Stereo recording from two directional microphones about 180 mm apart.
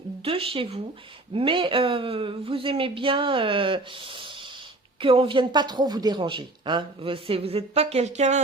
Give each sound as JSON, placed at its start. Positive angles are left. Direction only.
{"t": 0.3, "sound": "speech", "side_deg": -30}